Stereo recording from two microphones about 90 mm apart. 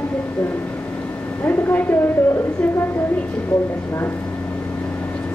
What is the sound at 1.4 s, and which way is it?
A woman's voice, 20° left (ahead or behind).